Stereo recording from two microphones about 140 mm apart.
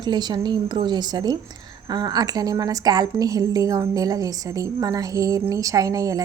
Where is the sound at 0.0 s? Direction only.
30° right (ahead or behind).